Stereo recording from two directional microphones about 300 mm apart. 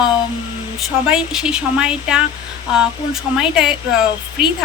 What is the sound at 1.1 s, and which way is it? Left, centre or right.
Speech, centre.